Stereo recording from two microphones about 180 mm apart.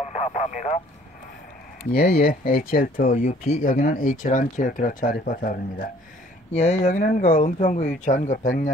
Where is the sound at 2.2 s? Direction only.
55° left (ahead or behind).